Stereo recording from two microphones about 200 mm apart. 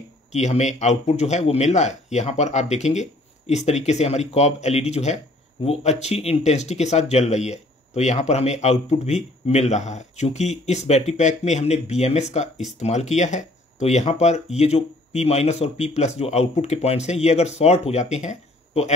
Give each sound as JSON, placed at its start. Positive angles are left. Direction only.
{"t": 0.3, "sound": "speech", "side_deg": 35}